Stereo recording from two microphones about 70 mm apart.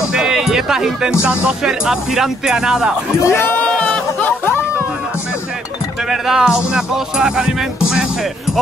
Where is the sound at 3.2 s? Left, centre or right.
Left.